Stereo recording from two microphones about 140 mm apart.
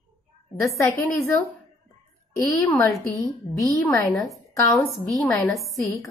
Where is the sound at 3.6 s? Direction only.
Centre (ahead or behind).